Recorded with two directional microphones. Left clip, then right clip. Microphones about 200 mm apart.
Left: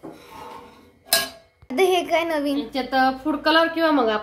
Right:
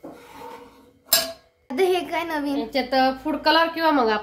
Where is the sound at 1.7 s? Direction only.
5° left (ahead or behind).